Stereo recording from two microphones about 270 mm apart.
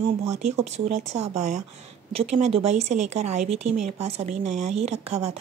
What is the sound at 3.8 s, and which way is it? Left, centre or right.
Speech, right.